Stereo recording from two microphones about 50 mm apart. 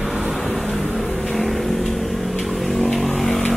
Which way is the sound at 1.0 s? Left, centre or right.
Left.